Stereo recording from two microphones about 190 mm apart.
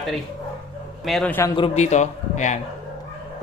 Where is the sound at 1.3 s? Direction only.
15° left (ahead or behind).